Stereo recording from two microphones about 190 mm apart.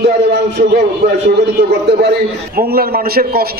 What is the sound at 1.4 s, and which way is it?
A man's voice, 60° right (ahead or behind).